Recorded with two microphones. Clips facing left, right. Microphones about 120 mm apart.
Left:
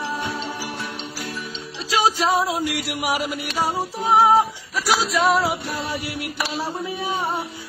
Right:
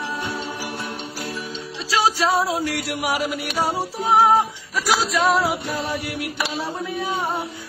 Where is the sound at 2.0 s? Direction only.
15° left (ahead or behind).